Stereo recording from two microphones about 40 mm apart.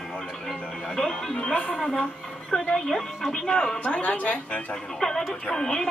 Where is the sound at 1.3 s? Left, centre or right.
Left.